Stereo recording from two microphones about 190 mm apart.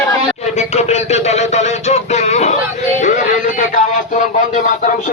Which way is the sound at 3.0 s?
40° left (ahead or behind).